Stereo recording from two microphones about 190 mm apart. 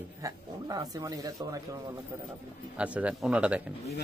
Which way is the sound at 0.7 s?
20° right (ahead or behind).